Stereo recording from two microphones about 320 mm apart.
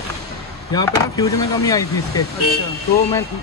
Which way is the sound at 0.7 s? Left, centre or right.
Centre.